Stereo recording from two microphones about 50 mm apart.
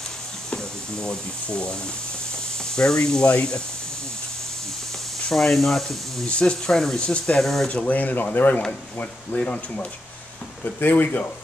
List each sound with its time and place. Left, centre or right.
0.5 s speech: centre
5.3 s speech: centre
6.2 s speech: centre
7.0 s speech: left
7.3 s speech: centre
7.8 s speech: left
9.3 s speech: left
10.6 s speech: left